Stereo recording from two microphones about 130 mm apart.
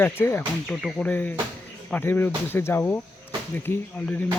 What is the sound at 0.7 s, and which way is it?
Speech, centre (ahead or behind).